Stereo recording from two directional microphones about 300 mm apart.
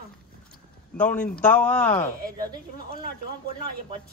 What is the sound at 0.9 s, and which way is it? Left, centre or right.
A man's voice, centre.